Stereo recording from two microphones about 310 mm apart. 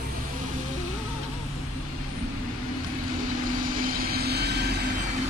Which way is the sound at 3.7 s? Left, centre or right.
Right.